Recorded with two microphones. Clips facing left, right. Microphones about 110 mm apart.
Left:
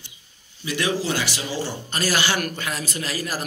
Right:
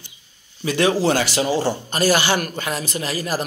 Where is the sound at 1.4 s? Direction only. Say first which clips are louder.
Right 9 dB; 45° right (ahead or behind).